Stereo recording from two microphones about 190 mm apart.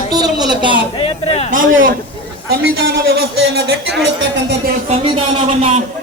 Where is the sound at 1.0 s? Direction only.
30° left (ahead or behind).